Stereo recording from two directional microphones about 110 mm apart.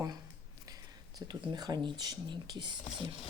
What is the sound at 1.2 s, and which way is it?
Speech, 40° right (ahead or behind).